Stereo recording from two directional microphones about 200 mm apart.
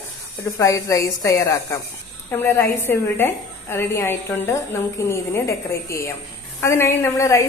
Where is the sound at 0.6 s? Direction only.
15° left (ahead or behind).